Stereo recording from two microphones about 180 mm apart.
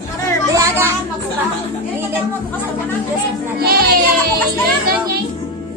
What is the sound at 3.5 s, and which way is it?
Music, 60° right (ahead or behind).